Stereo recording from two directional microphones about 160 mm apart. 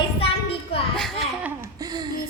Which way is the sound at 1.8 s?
25° right (ahead or behind).